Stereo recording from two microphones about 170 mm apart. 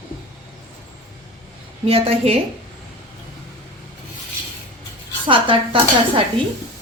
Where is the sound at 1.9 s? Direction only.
35° right (ahead or behind).